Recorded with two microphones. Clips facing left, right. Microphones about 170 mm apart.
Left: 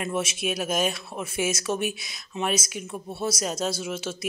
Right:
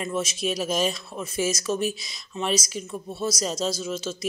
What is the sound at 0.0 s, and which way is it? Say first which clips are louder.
Speech: right 1 dB; 10° left (ahead or behind).